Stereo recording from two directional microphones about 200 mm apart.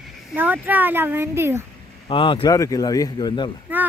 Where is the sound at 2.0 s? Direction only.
25° left (ahead or behind).